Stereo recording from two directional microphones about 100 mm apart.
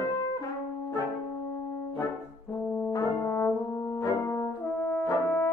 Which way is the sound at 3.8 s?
35° left (ahead or behind).